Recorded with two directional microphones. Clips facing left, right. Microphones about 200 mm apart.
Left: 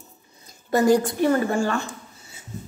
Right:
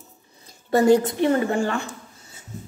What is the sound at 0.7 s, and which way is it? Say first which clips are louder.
A woman's voice: right 2 dB; 25° right (ahead or behind).